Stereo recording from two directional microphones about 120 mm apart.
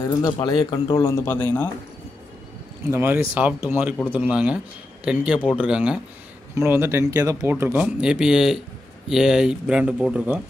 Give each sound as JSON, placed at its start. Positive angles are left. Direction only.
{"t": 0.0, "sound": "speech", "side_deg": 35}
{"t": 2.9, "sound": "speech", "side_deg": -20}
{"t": 6.5, "sound": "speech", "side_deg": -20}